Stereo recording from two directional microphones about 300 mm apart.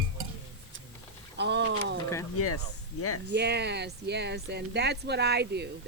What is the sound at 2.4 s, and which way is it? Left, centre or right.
Speech, left.